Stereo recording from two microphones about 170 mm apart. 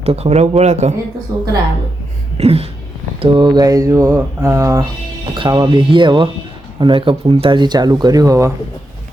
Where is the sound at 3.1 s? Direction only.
30° right (ahead or behind).